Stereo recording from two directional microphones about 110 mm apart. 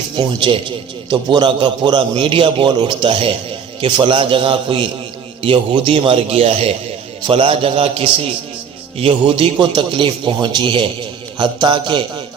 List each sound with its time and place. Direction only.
0.2 s a man's voice: 45° right (ahead or behind)